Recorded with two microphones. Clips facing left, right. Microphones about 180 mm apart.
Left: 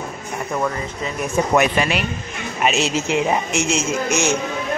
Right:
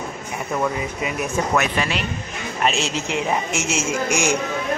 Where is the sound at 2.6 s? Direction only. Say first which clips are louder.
Left 3 dB; 5° left (ahead or behind).